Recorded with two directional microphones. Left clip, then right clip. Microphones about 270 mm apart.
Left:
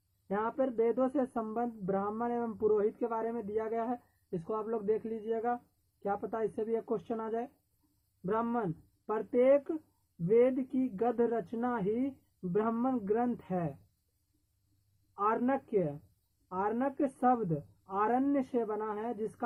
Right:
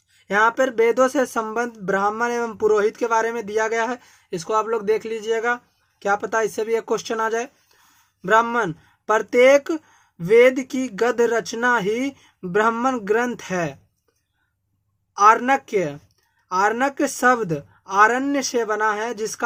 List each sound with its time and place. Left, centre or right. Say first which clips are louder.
0.3 s speech: right 15 dB; centre
15.2 s speech: right 16 dB; centre